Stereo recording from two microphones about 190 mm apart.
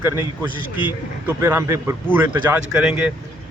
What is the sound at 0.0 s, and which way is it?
Speech, 10° right (ahead or behind).